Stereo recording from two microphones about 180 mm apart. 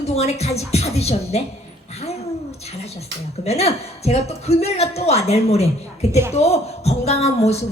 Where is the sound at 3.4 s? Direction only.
35° left (ahead or behind).